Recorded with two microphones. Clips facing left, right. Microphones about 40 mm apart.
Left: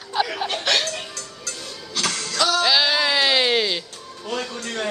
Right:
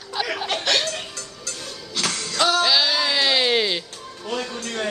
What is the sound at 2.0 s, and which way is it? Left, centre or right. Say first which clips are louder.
Music: left 1 dB; centre.